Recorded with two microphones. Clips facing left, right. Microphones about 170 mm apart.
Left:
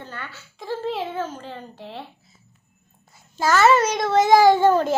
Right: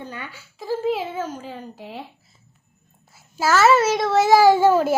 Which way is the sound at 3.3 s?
5° right (ahead or behind).